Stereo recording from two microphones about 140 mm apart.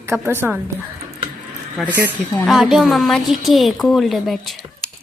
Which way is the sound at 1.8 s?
Centre (ahead or behind).